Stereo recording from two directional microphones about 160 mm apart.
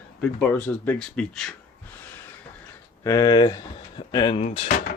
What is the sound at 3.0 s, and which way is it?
Speech, 20° left (ahead or behind).